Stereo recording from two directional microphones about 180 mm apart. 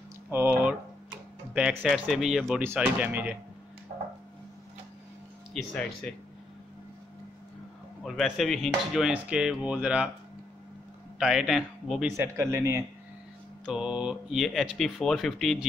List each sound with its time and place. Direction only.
0.3 s speech: 10° right (ahead or behind)
3.9 s a sound: 50° right (ahead or behind)
5.5 s speech: 5° left (ahead or behind)
8.0 s speech: centre (ahead or behind)
11.1 s speech: 5° right (ahead or behind)
12.2 s speech: 15° right (ahead or behind)
13.7 s speech: 5° right (ahead or behind)